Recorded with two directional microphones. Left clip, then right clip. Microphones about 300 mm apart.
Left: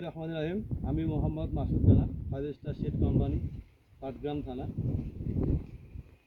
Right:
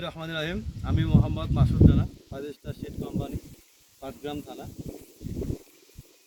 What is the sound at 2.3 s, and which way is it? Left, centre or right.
Speech, centre.